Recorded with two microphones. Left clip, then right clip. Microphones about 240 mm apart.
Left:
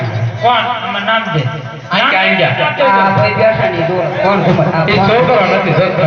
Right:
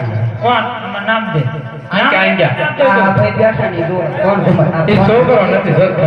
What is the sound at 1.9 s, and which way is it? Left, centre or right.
A man's voice, right.